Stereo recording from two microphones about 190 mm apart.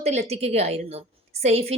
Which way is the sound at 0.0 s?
35° right (ahead or behind).